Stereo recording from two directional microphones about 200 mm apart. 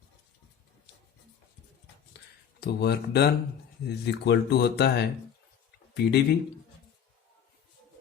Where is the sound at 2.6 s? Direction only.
55° left (ahead or behind).